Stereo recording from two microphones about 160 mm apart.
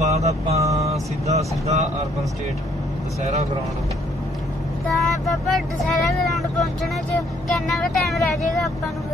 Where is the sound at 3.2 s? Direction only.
40° right (ahead or behind).